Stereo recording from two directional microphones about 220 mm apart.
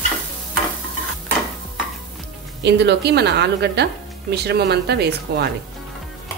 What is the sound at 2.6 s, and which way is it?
A woman's voice, 50° right (ahead or behind).